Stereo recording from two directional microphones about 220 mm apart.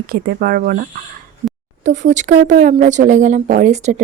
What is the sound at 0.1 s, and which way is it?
Speech, 40° right (ahead or behind).